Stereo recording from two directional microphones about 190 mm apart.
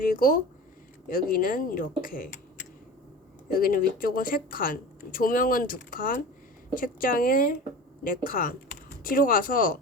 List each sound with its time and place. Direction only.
0.0 s speech: 50° left (ahead or behind)
3.5 s speech: 50° left (ahead or behind)